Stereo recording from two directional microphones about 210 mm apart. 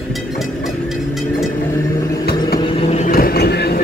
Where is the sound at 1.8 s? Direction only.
15° left (ahead or behind).